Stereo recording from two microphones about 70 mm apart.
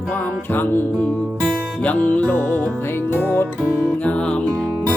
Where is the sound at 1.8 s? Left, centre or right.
Left.